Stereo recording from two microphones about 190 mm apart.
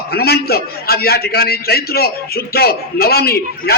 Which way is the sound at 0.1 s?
55° left (ahead or behind).